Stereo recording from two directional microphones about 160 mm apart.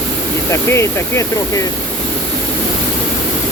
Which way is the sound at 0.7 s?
15° left (ahead or behind).